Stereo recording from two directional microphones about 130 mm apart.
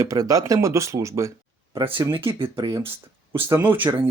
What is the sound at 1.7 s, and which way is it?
Speech, 40° right (ahead or behind).